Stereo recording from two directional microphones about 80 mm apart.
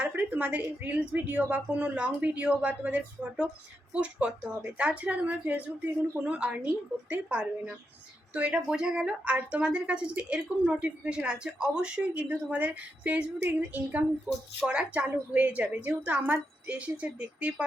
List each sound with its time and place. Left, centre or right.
0.0 s a woman's voice: centre